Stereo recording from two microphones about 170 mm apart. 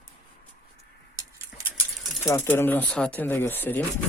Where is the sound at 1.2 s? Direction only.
20° right (ahead or behind).